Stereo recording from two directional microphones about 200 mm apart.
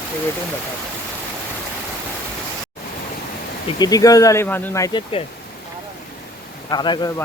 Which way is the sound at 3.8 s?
20° left (ahead or behind).